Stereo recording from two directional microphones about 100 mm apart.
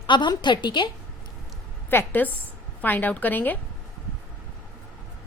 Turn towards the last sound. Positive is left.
turn(degrees=20)  # may be behind; listen again after turning